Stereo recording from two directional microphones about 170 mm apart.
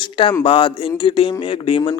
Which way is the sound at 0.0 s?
30° left (ahead or behind).